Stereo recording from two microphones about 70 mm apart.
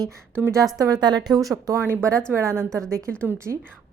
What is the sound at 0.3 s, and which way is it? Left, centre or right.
Speech, right.